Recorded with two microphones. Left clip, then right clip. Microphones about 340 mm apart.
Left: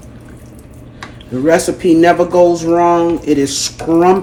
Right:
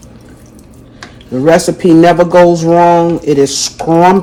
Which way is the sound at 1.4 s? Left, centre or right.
Right.